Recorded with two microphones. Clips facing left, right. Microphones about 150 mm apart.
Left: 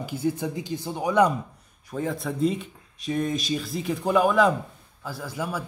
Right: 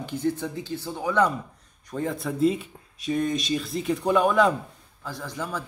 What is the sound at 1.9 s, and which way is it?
Speech, centre (ahead or behind).